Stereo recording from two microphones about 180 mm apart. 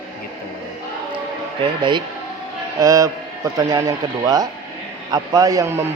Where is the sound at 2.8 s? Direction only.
20° right (ahead or behind).